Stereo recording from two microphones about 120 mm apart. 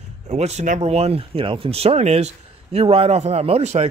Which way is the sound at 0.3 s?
65° right (ahead or behind).